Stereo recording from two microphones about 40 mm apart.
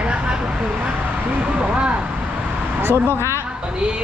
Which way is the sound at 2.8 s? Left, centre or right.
Right.